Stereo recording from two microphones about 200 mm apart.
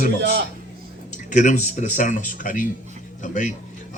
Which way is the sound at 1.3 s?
40° left (ahead or behind).